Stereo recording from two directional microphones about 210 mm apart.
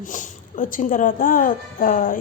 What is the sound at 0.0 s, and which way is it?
A woman's voice, 35° left (ahead or behind).